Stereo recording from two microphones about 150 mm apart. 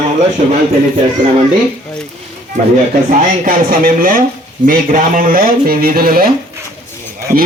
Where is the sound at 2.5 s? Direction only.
50° right (ahead or behind).